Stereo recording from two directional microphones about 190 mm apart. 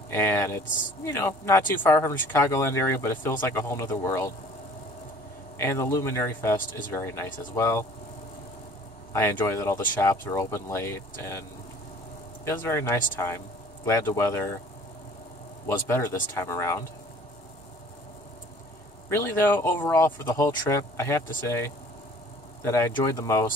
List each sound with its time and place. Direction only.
0.1 s speech: 15° left (ahead or behind)
5.6 s speech: 15° left (ahead or behind)
9.1 s speech: 15° left (ahead or behind)
12.4 s speech: 15° left (ahead or behind)
15.6 s speech: 15° left (ahead or behind)
19.0 s speech: 15° left (ahead or behind)